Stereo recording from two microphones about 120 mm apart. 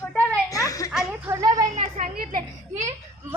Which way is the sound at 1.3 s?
30° right (ahead or behind).